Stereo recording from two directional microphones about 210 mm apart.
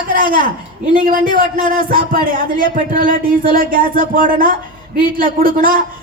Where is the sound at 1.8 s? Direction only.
40° right (ahead or behind).